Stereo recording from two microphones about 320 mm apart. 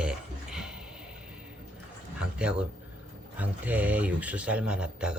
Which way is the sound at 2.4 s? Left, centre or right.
Centre.